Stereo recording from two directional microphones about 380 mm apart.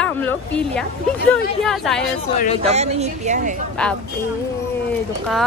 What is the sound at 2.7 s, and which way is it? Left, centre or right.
Speech, centre.